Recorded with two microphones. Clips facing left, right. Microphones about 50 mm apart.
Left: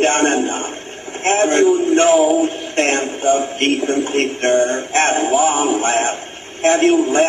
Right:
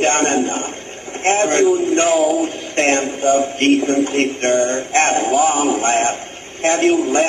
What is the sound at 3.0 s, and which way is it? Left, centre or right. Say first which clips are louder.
Music: right 1 dB; centre.